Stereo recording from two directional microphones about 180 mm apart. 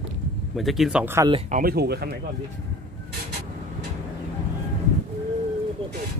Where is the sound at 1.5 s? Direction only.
55° right (ahead or behind).